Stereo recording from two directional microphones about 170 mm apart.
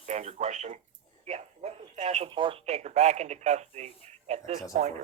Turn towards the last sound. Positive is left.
turn(degrees=-40)  # may be behind; listen again after turning